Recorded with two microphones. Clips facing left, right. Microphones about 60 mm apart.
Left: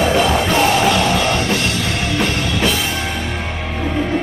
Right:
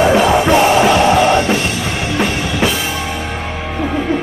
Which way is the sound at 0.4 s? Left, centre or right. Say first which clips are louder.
Right 4 dB; right.